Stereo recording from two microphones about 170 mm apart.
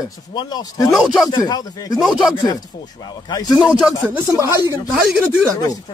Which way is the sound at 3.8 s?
5° right (ahead or behind).